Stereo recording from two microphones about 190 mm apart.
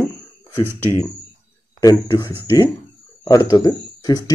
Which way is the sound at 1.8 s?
15° left (ahead or behind).